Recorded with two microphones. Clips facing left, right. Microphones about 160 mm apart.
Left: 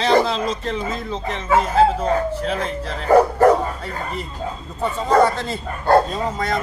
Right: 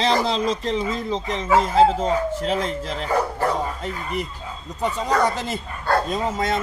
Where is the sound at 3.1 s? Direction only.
45° left (ahead or behind).